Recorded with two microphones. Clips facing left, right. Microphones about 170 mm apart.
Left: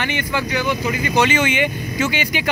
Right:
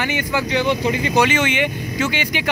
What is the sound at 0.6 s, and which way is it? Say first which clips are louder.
Speech: right 2 dB; 25° right (ahead or behind).